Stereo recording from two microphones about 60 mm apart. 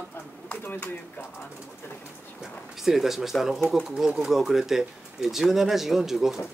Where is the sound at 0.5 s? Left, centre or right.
Left.